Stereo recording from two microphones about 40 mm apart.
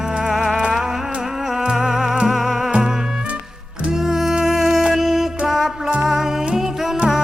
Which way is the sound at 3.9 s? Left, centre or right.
Centre.